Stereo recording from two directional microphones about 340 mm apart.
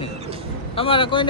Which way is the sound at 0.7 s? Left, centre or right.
Centre.